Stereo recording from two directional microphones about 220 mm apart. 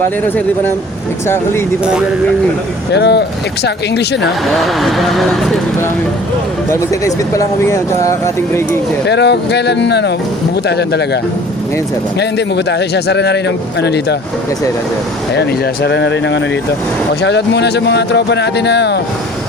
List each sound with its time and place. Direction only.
1.8 s speech: 5° right (ahead or behind)
2.9 s a man's voice: 50° left (ahead or behind)
4.5 s speech: centre (ahead or behind)
6.7 s speech: 15° left (ahead or behind)
9.0 s a man's voice: 50° left (ahead or behind)
12.2 s a man's voice: 50° left (ahead or behind)
15.4 s a man's voice: 50° left (ahead or behind)